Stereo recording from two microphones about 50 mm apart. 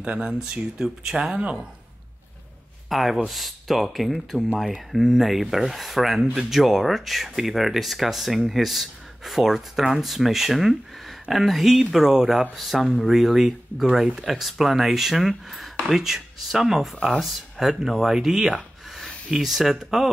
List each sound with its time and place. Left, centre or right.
0.0 s speech: right
0.6 s a man's voice: centre
2.9 s speech: centre